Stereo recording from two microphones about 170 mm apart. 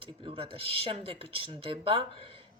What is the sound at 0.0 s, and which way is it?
Speech, 30° right (ahead or behind).